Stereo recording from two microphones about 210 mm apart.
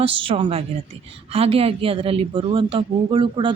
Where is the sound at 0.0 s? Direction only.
25° right (ahead or behind).